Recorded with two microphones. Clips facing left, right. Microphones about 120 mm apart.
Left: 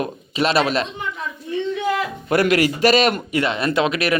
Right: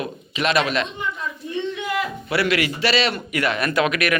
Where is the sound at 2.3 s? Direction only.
45° left (ahead or behind).